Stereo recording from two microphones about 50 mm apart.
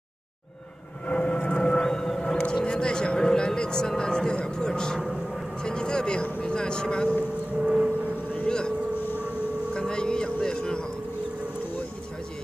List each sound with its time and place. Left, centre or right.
1.0 s vehicle: left
1.7 s whale vocalization: centre
2.4 s speech: centre
5.0 s vehicle: centre
5.6 s speech: centre
7.6 s vehicle: right
8.5 s speech: centre
9.0 s civil defense siren: left
9.8 s speech: centre